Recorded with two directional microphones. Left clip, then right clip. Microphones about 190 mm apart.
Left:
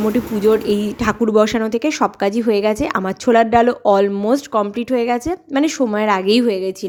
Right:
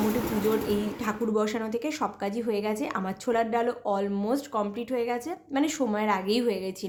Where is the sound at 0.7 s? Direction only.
40° left (ahead or behind).